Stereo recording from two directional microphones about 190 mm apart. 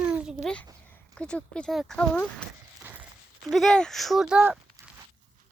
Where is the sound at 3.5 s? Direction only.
Centre (ahead or behind).